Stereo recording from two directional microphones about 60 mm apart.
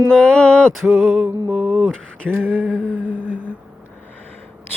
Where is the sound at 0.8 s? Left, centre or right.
Centre.